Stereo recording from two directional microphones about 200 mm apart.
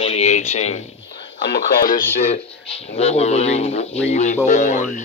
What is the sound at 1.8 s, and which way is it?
Speech, 40° left (ahead or behind).